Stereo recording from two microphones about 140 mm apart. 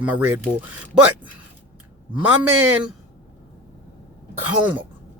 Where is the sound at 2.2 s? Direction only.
15° right (ahead or behind).